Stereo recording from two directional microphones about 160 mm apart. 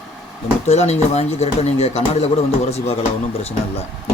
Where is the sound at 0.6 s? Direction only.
45° left (ahead or behind).